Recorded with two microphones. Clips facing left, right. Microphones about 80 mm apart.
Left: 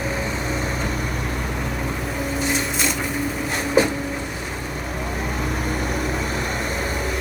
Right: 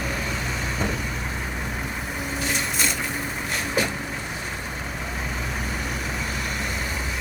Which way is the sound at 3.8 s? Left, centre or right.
Left.